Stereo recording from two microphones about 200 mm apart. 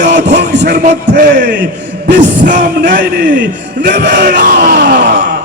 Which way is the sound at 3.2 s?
60° right (ahead or behind).